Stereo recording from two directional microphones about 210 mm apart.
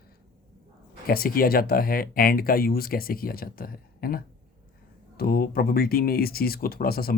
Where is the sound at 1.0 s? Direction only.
45° left (ahead or behind).